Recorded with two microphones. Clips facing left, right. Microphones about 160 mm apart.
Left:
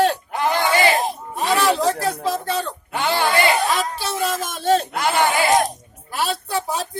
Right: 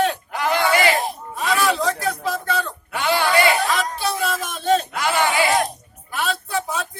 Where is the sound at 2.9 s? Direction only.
20° left (ahead or behind).